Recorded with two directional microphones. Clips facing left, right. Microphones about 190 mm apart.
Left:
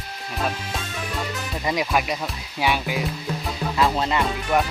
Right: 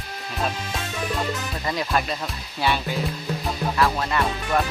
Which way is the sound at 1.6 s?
15° left (ahead or behind).